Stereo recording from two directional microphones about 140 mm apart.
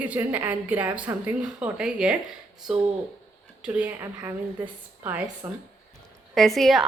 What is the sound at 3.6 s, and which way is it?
Speech, 10° right (ahead or behind).